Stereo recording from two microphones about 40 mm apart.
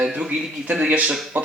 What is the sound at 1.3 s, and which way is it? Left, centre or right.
Speech, right.